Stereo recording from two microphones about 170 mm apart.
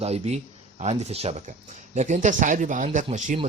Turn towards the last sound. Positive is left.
turn(degrees=-45)  # may be behind; listen again after turning